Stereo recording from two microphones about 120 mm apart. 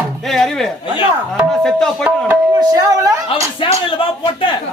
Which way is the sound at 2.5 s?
30° right (ahead or behind).